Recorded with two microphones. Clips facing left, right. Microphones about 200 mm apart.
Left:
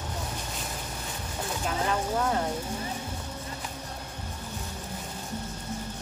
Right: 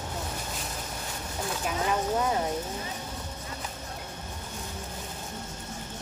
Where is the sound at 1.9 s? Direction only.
10° right (ahead or behind).